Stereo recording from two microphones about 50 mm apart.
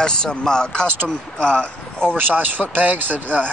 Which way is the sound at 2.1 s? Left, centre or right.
Right.